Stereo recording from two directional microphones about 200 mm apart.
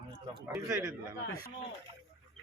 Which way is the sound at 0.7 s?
15° right (ahead or behind).